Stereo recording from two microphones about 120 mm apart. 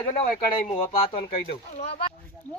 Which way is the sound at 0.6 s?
50° left (ahead or behind).